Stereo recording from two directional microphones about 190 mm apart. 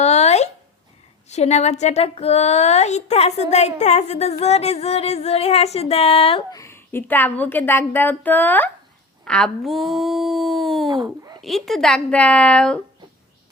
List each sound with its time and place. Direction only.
0.0 s a sound: 35° left (ahead or behind)
1.3 s a woman's voice: 35° left (ahead or behind)
6.6 s a woman's voice: 15° left (ahead or behind)
11.0 s a child's voice: 15° right (ahead or behind)
11.3 s speech: centre (ahead or behind)